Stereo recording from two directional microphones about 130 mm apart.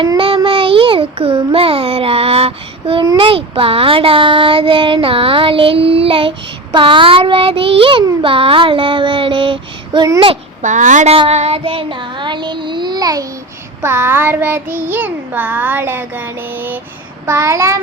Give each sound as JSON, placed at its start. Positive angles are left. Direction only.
{"t": 0.2, "sound": "a child's voice", "side_deg": -45}
{"t": 8.2, "sound": "child singing", "side_deg": -45}
{"t": 10.6, "sound": "a child's voice", "side_deg": -70}
{"t": 11.1, "sound": "child singing", "side_deg": -50}
{"t": 13.8, "sound": "child singing", "side_deg": -20}